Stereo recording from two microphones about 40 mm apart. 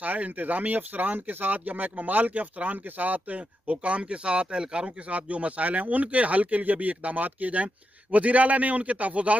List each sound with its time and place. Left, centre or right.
0.0 s speech: right